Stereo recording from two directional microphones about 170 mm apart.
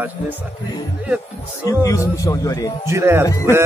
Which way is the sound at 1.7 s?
20° left (ahead or behind).